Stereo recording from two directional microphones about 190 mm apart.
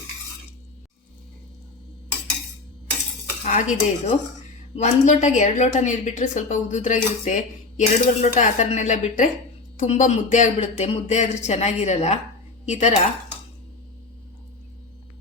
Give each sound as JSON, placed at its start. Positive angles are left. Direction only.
{"t": 3.4, "sound": "a woman's voice", "side_deg": 35}